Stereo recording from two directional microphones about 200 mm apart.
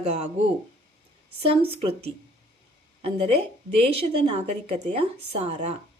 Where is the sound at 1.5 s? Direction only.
30° right (ahead or behind).